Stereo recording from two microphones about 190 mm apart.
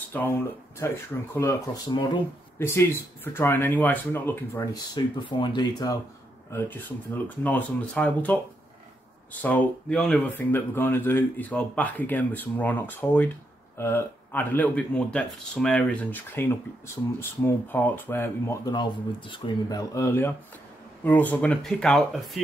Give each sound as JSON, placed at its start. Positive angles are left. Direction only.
{"t": 0.1, "sound": "speech", "side_deg": 10}
{"t": 4.9, "sound": "speech", "side_deg": 25}
{"t": 7.2, "sound": "speech", "side_deg": 10}
{"t": 18.7, "sound": "speech", "side_deg": 25}